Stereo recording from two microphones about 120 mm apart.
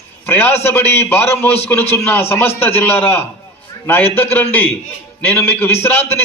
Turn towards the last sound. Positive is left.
turn(degrees=20)  # may be behind; listen again after turning